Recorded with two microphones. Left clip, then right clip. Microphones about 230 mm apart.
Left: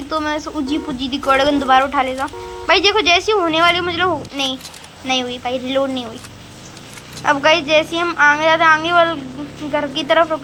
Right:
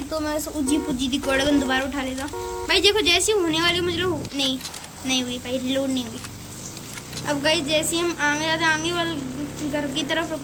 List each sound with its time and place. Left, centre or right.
0.1 s speech: left
0.7 s a woman's voice: centre
7.2 s a woman's voice: centre